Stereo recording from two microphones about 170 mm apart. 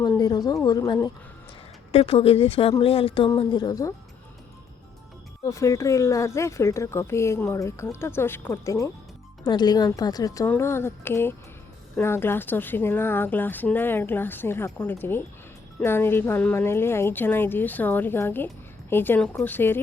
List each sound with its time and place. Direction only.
0.0 s a woman's voice: 25° left (ahead or behind)
1.9 s speech: 35° left (ahead or behind)
5.4 s a woman's voice: 20° left (ahead or behind)